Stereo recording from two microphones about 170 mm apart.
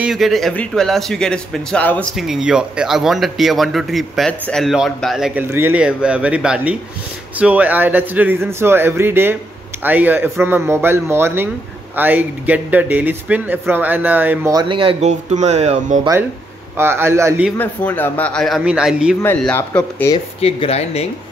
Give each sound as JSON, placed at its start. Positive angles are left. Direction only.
{"t": 0.0, "sound": "a man's voice", "side_deg": 0}
{"t": 2.1, "sound": "a man's voice", "side_deg": -5}
{"t": 14.5, "sound": "speech", "side_deg": -25}
{"t": 16.7, "sound": "speech", "side_deg": -15}
{"t": 17.6, "sound": "a man's voice", "side_deg": 10}
{"t": 19.2, "sound": "speech", "side_deg": 10}
{"t": 20.3, "sound": "speech", "side_deg": 35}